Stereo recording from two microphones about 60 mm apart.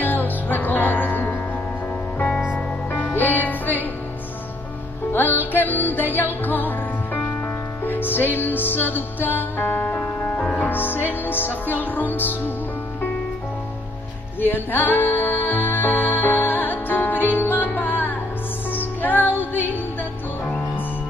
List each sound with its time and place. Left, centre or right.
0.0 s music: left
5.1 s music: left
10.4 s music: centre
10.7 s music: left
14.4 s music: left